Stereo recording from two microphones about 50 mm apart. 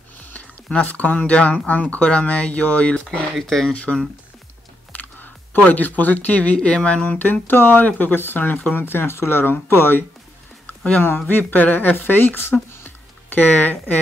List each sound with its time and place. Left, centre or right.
0.3 s speech: left
3.3 s speech: centre
3.7 s speech: left
4.9 s music: left
5.7 s speech: left
7.4 s speech: left